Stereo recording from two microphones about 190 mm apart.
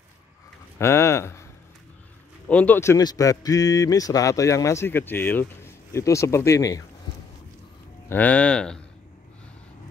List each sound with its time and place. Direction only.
0.7 s speech: 15° left (ahead or behind)
8.1 s speech: 10° left (ahead or behind)